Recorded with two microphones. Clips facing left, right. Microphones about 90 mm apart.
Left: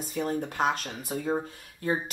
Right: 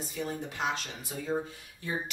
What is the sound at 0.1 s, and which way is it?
Speech, 50° left (ahead or behind).